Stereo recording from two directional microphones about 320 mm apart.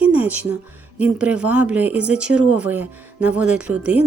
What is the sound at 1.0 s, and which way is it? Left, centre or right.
Speech, centre.